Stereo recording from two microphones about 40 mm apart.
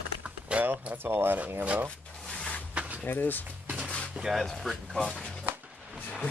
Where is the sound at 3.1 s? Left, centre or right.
Left.